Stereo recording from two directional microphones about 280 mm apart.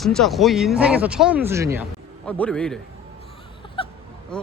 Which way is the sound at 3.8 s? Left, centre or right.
Centre.